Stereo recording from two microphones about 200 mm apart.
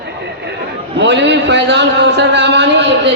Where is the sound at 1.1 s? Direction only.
60° right (ahead or behind).